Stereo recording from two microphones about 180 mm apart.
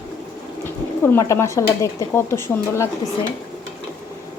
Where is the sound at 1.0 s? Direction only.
15° left (ahead or behind).